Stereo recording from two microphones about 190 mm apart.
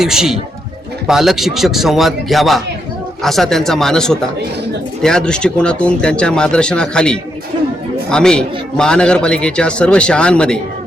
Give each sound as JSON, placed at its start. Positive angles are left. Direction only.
{"t": 0.0, "sound": "a man's voice", "side_deg": -5}